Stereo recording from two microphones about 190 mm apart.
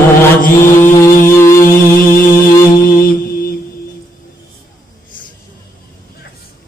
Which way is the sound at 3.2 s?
50° left (ahead or behind).